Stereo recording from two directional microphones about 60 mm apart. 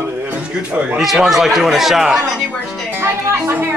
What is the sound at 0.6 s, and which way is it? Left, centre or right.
Speech, right.